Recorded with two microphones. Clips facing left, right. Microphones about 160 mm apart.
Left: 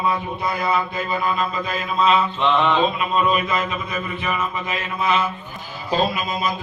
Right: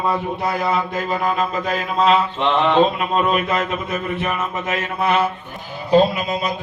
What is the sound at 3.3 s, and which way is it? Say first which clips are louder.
A man's voice: right 2 dB; 65° right (ahead or behind).